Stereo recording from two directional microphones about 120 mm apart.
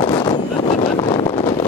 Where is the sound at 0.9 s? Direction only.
50° left (ahead or behind).